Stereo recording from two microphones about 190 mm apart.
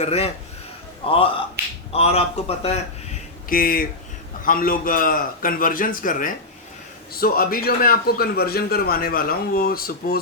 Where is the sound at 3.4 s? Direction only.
50° left (ahead or behind).